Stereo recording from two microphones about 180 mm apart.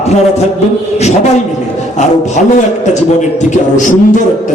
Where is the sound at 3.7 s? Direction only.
45° left (ahead or behind).